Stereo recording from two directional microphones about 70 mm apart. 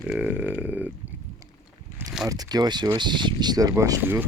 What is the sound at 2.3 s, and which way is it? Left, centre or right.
Speech, right.